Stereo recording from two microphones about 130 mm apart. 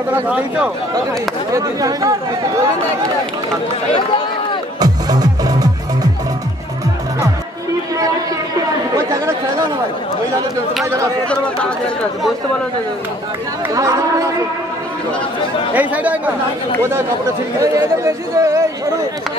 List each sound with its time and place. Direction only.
0.1 s speech: 10° right (ahead or behind)
1.5 s speech: 30° right (ahead or behind)
4.7 s music: 30° right (ahead or behind)
8.9 s chatter: 25° right (ahead or behind)
11.2 s speech: 10° left (ahead or behind)
13.7 s speech: 25° right (ahead or behind)
15.7 s speech: 10° right (ahead or behind)
17.6 s speech: 25° right (ahead or behind)